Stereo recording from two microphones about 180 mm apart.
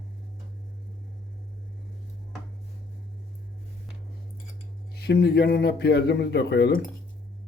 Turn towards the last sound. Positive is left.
turn(degrees=70)  # may be behind; listen again after turning